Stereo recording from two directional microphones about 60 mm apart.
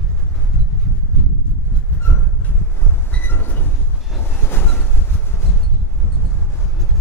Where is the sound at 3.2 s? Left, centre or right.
Left.